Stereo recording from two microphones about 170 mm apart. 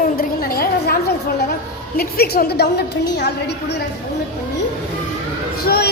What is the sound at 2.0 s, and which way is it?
A woman's voice, 65° left (ahead or behind).